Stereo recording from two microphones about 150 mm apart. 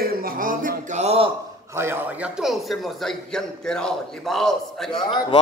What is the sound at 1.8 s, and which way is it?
Speech, 15° right (ahead or behind).